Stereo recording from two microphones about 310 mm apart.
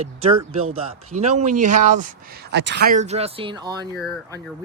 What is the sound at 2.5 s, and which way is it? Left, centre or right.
Speech, right.